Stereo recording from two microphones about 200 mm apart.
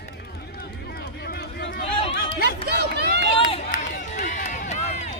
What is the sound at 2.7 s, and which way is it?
Run, 55° right (ahead or behind).